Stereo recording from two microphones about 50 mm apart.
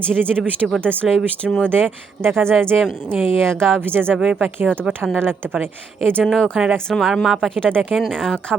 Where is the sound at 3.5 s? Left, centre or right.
Centre.